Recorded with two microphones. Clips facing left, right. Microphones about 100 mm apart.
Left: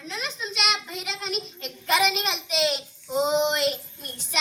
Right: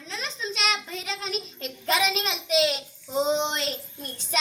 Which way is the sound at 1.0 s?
40° right (ahead or behind).